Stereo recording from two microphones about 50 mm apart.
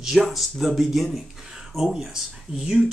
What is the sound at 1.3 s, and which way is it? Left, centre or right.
Speech, centre.